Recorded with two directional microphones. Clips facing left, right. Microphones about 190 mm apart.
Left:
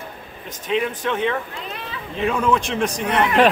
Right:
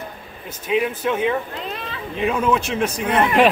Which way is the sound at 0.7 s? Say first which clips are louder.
Right 2 dB; 10° right (ahead or behind).